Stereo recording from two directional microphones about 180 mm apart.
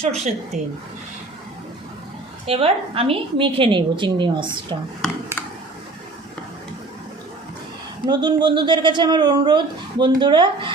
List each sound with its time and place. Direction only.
0.0 s speech: 40° right (ahead or behind)
2.5 s speech: 30° right (ahead or behind)
8.0 s speech: 25° right (ahead or behind)